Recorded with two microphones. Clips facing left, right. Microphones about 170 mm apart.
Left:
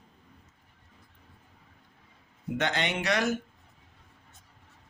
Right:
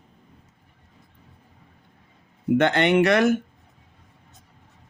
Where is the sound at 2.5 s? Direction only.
60° right (ahead or behind).